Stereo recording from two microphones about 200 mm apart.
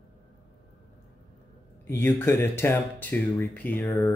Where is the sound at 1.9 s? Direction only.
10° left (ahead or behind).